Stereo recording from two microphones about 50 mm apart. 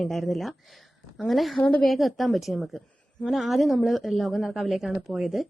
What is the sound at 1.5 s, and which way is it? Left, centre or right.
Speech, left.